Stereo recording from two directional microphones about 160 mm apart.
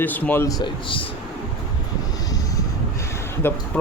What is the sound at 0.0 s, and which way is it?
Speech, 10° left (ahead or behind).